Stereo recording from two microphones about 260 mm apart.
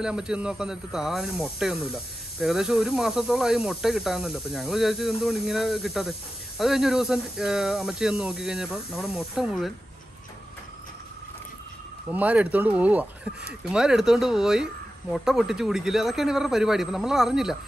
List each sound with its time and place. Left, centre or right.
0.0 s speech: centre
12.1 s speech: centre